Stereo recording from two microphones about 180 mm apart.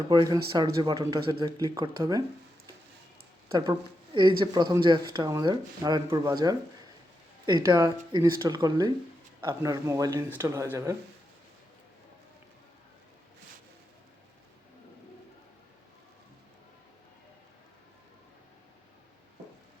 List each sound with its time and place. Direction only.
0.1 s speech: 25° right (ahead or behind)
3.7 s speech: 25° right (ahead or behind)